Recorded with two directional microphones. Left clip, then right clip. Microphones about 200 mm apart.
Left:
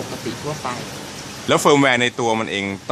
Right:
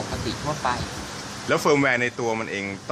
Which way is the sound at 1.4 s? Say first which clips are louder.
Left 5 dB; 40° left (ahead or behind).